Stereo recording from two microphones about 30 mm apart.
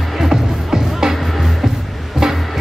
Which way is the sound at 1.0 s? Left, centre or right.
Right.